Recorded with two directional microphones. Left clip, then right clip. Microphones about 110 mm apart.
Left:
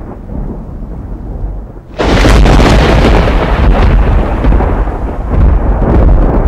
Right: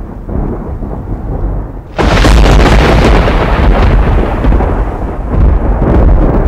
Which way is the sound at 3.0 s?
Centre (ahead or behind).